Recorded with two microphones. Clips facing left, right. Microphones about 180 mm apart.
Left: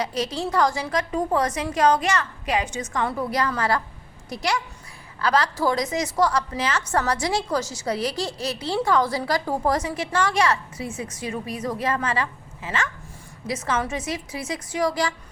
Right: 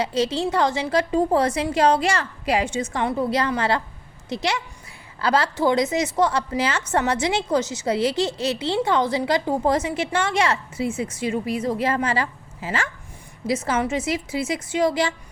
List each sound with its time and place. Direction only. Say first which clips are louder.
0.0 s a woman's voice: right 4 dB; 25° right (ahead or behind)